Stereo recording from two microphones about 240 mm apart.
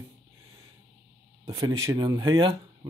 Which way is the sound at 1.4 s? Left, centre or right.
Centre.